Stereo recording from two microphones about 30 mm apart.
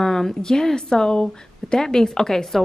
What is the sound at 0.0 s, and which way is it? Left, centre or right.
Speech, centre.